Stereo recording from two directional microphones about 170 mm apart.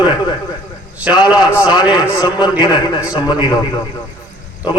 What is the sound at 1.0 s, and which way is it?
A man's voice, 25° left (ahead or behind).